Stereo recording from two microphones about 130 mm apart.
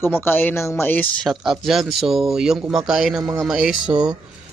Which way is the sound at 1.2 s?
Centre (ahead or behind).